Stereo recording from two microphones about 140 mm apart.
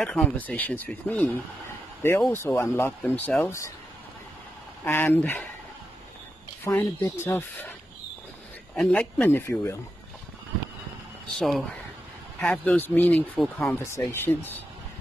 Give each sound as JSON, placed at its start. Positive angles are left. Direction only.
{"t": 0.0, "sound": "speech", "side_deg": 5}
{"t": 4.8, "sound": "speech", "side_deg": 15}
{"t": 6.6, "sound": "speech", "side_deg": 15}
{"t": 8.7, "sound": "speech", "side_deg": 5}
{"t": 11.3, "sound": "speech", "side_deg": 0}
{"t": 13.9, "sound": "speech", "side_deg": 15}